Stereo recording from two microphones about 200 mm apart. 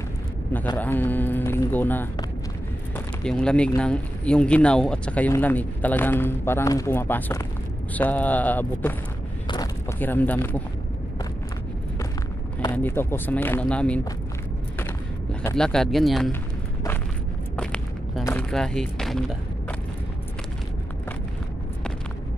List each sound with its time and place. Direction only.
0.7 s speech: 10° left (ahead or behind)
3.3 s speech: 5° left (ahead or behind)
9.5 s a sound: 20° left (ahead or behind)
9.9 s speech: 10° left (ahead or behind)
12.7 s speech: 10° left (ahead or behind)
15.5 s speech: 5° left (ahead or behind)
17.6 s walk: 5° left (ahead or behind)
18.5 s speech: 5° left (ahead or behind)